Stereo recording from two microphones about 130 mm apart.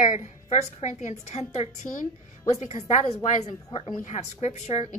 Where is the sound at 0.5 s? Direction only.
65° left (ahead or behind).